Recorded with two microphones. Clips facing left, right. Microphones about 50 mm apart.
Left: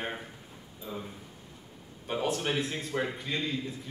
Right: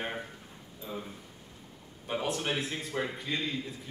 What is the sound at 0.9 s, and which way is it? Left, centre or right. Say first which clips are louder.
Speech: left 1 dB; centre.